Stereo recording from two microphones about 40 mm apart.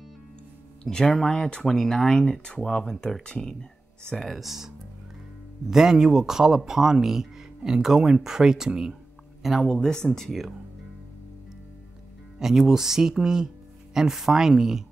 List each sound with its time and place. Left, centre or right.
0.8 s speech: centre
4.2 s speech: centre
9.4 s speech: centre
9.7 s speech: centre
12.4 s speech: centre